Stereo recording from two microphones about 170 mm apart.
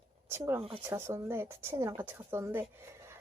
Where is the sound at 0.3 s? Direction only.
15° right (ahead or behind).